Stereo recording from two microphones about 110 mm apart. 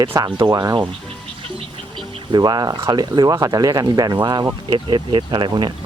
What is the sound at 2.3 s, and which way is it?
Speech, 40° right (ahead or behind).